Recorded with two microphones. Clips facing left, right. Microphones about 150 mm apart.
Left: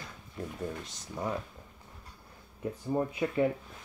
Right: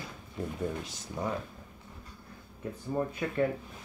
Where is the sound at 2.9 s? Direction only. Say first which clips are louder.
Left 2 dB; 15° left (ahead or behind).